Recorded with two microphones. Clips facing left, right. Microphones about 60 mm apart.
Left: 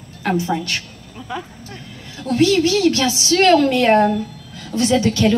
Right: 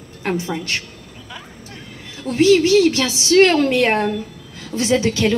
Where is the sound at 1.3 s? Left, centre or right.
Left.